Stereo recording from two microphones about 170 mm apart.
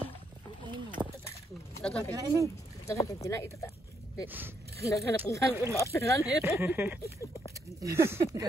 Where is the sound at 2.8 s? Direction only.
15° left (ahead or behind).